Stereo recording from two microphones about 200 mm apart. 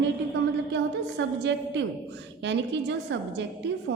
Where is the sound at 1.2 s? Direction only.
65° right (ahead or behind).